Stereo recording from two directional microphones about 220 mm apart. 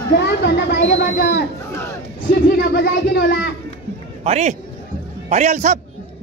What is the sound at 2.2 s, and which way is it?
Speech, 45° left (ahead or behind).